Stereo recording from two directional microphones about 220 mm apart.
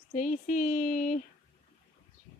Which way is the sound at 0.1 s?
35° left (ahead or behind).